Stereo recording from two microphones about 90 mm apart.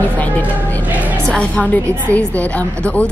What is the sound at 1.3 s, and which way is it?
A woman's voice, 10° left (ahead or behind).